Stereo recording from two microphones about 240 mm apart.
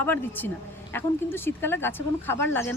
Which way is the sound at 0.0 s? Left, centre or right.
Centre.